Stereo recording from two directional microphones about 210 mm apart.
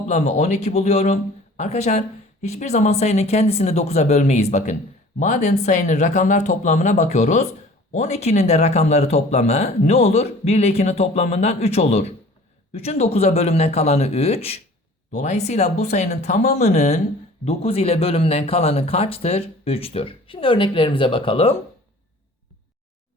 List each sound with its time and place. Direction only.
0.1 s speech: 35° left (ahead or behind)